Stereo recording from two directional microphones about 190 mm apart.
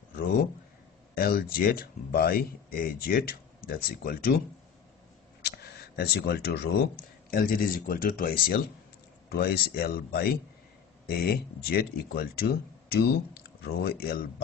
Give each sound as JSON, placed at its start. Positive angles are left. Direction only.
{"t": 0.1, "sound": "a sound", "side_deg": 50}
{"t": 1.1, "sound": "speech", "side_deg": 50}
{"t": 5.4, "sound": "camera", "side_deg": 55}
{"t": 7.2, "sound": "speech", "side_deg": 50}